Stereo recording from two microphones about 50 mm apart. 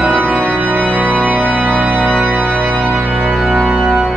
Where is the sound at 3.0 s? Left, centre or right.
Right.